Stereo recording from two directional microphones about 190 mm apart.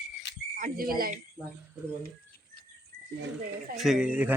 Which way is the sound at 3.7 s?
Centre (ahead or behind).